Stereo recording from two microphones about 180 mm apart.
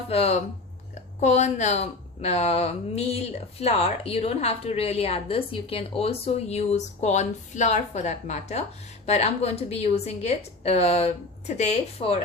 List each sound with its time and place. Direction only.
0.1 s a woman's voice: 35° left (ahead or behind)